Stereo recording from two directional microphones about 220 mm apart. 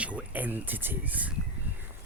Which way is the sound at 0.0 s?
5° right (ahead or behind).